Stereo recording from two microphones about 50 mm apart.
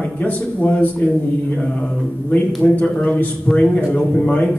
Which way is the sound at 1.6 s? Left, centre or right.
Left.